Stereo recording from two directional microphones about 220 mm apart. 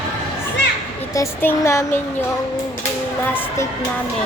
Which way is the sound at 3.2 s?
10° left (ahead or behind).